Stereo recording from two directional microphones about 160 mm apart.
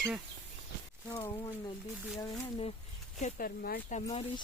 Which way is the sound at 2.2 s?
25° left (ahead or behind).